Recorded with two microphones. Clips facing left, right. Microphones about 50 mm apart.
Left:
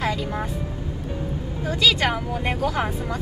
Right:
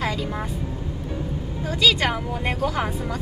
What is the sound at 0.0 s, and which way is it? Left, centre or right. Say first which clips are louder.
Vehicle: left 1 dB; centre.